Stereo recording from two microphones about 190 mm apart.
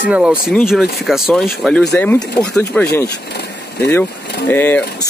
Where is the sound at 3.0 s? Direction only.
60° left (ahead or behind).